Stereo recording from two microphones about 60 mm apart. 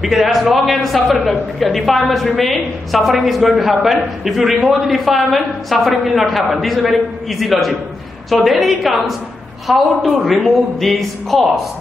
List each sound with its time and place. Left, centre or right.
0.0 s a woman's voice: centre